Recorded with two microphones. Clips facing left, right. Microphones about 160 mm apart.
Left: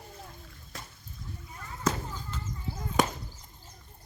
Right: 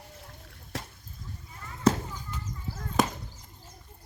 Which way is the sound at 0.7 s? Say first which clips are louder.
Right 7 dB; 90° right.